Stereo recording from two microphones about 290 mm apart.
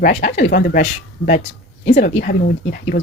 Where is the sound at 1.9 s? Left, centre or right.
Left.